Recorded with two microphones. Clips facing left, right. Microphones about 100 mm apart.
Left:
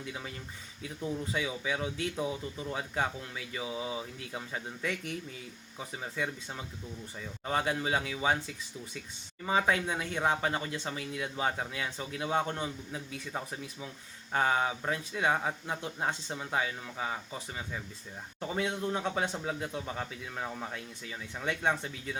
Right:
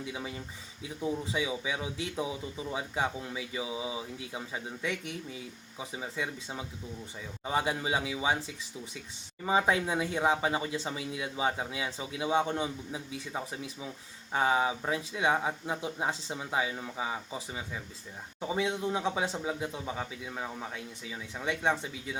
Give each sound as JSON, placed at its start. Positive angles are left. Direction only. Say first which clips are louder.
{"t": 1.3, "sound": "speech", "louder": "right 1 dB", "side_deg": -5}
{"t": 5.9, "sound": "speech", "louder": "even", "side_deg": -5}
{"t": 9.5, "sound": "speech", "louder": "right 2 dB", "side_deg": -20}
{"t": 12.6, "sound": "speech", "louder": "right 1 dB", "side_deg": -10}